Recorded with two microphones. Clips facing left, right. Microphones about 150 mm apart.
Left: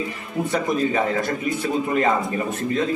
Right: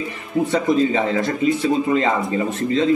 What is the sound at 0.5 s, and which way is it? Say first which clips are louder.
Speech: right 3 dB; 80° right.